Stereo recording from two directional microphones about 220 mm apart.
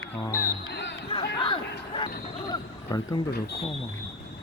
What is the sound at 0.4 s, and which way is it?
Music, 50° left (ahead or behind).